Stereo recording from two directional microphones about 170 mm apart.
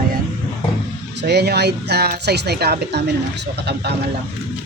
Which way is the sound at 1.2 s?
75° right (ahead or behind).